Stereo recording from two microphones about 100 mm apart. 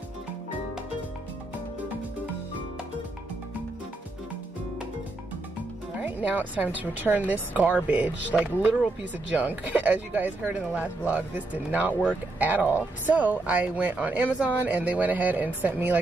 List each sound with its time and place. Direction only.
6.0 s speech: 15° right (ahead or behind)